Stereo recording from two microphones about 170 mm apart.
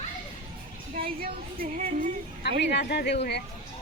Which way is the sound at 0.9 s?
60° right (ahead or behind).